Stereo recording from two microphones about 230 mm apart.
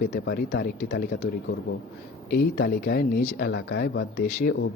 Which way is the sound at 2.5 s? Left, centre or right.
Left.